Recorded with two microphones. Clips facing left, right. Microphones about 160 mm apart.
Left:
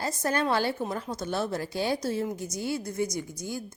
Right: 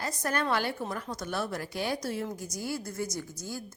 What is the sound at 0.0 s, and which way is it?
A woman's voice, 25° left (ahead or behind).